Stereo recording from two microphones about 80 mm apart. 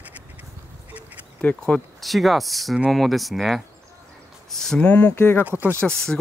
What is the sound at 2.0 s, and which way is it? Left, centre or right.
Speech, centre.